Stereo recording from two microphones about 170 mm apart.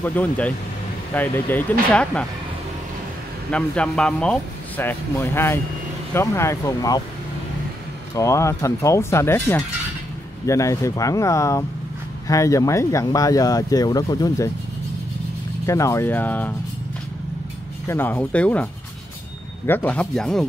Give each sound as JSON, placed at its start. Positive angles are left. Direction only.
{"t": 0.0, "sound": "speech", "side_deg": 10}
{"t": 3.5, "sound": "speech", "side_deg": 5}
{"t": 8.1, "sound": "speech", "side_deg": 15}
{"t": 15.6, "sound": "speech", "side_deg": 20}
{"t": 17.8, "sound": "speech", "side_deg": 10}